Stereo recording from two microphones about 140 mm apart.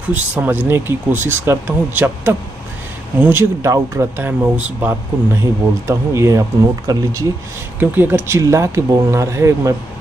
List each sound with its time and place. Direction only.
0.1 s speech: 15° right (ahead or behind)